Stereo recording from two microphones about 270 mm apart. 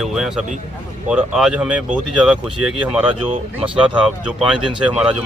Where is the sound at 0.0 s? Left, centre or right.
Centre.